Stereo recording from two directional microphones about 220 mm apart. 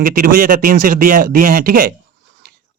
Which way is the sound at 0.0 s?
40° right (ahead or behind).